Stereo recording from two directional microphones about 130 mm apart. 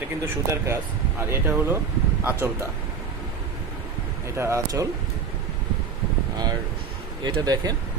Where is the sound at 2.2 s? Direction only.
20° right (ahead or behind).